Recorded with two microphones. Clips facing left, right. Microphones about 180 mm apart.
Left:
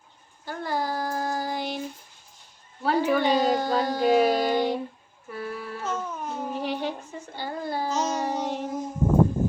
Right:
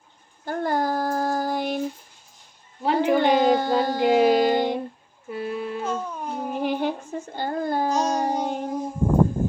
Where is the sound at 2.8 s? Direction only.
20° right (ahead or behind).